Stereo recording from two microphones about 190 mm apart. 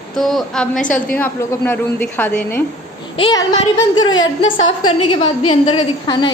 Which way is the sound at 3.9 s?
90° left.